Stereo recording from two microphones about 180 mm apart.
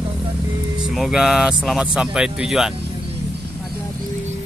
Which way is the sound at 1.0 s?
5° right (ahead or behind).